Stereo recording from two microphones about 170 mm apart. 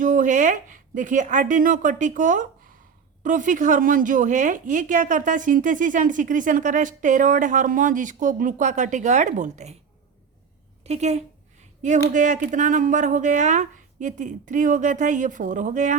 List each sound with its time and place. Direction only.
0.0 s speech: 50° right (ahead or behind)
10.8 s a woman's voice: 40° right (ahead or behind)